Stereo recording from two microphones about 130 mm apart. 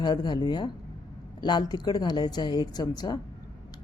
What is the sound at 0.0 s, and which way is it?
Speech, 35° left (ahead or behind).